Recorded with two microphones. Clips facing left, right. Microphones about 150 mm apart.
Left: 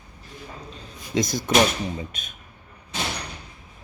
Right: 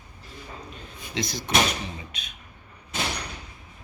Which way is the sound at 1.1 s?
45° left (ahead or behind).